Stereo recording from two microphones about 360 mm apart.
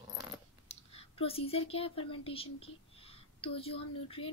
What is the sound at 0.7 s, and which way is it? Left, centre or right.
A woman's voice, centre.